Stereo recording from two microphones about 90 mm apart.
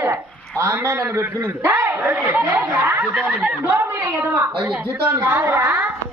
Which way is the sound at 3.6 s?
25° right (ahead or behind).